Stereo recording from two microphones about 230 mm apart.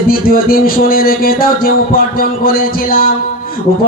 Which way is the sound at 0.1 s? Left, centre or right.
Left.